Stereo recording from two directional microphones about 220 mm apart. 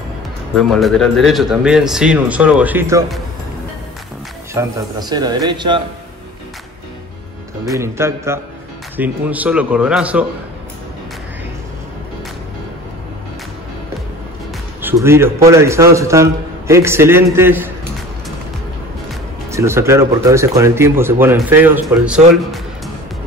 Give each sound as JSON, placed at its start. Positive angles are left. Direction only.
{"t": 0.6, "sound": "a man's voice", "side_deg": 0}
{"t": 4.6, "sound": "speech", "side_deg": -20}
{"t": 7.6, "sound": "a man's voice", "side_deg": -15}
{"t": 14.8, "sound": "a man's voice", "side_deg": -10}
{"t": 19.5, "sound": "a man's voice", "side_deg": -10}